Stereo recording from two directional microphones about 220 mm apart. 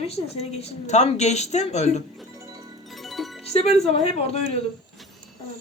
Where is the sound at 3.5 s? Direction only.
30° left (ahead or behind).